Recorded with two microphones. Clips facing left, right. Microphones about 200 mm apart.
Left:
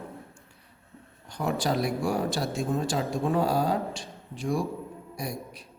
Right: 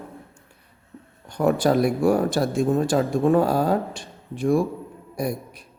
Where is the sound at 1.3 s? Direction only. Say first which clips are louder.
Right 8 dB; 55° right (ahead or behind).